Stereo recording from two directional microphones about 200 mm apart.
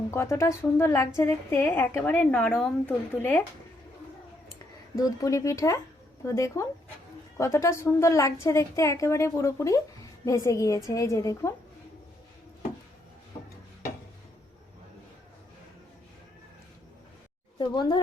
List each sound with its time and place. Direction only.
0.1 s a woman's voice: 15° left (ahead or behind)
4.9 s a woman's voice: 15° left (ahead or behind)
17.6 s a woman's voice: 20° left (ahead or behind)